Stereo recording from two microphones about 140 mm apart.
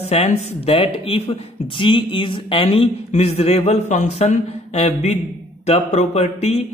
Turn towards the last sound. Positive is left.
turn(degrees=50)  # may be behind; listen again after turning